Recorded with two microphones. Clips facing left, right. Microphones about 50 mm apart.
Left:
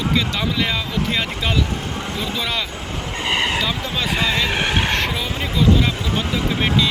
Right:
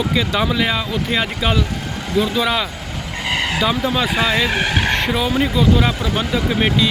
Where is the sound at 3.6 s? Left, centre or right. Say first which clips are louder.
Right 5 dB; centre.